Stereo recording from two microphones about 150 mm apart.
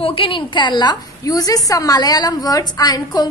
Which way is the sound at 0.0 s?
35° left (ahead or behind).